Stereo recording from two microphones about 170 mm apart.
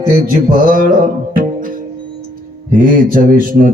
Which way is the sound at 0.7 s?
50° right (ahead or behind).